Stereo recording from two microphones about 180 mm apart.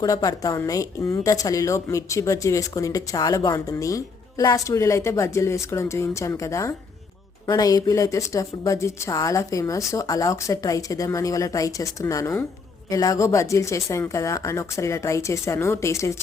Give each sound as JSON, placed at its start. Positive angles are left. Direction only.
{"t": 0.0, "sound": "a woman's voice", "side_deg": 20}